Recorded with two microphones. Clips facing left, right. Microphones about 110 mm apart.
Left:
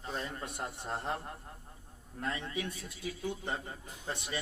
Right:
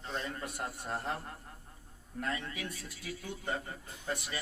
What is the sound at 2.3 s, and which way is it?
A man's voice, 25° left (ahead or behind).